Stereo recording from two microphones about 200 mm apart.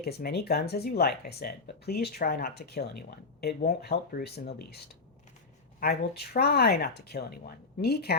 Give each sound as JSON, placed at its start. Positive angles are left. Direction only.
{"t": 0.0, "sound": "speech", "side_deg": 50}
{"t": 5.8, "sound": "speech", "side_deg": 50}